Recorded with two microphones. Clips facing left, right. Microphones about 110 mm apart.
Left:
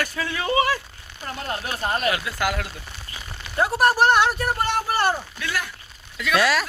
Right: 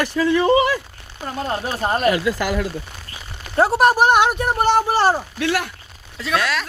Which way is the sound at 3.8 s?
15° right (ahead or behind).